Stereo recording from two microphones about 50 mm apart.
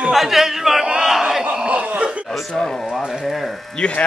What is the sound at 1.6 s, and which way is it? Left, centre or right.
Chuckle, right.